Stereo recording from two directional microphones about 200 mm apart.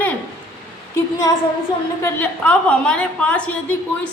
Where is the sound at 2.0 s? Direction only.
5° left (ahead or behind).